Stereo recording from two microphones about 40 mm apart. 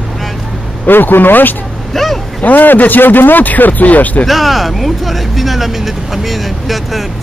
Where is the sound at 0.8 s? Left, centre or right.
Left.